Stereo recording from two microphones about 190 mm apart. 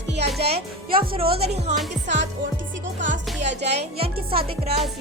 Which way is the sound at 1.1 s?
30° right (ahead or behind).